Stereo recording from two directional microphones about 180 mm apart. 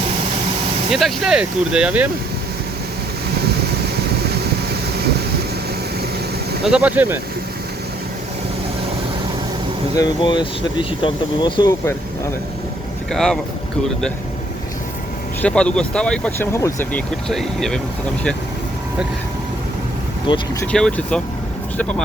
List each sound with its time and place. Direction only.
0.9 s speech: centre (ahead or behind)
6.7 s speech: 5° right (ahead or behind)
9.9 s speech: 25° left (ahead or behind)
13.1 s speech: centre (ahead or behind)
15.4 s speech: 5° left (ahead or behind)
17.2 s speech: 5° left (ahead or behind)
20.2 s speech: 25° left (ahead or behind)
20.6 s speech: 5° left (ahead or behind)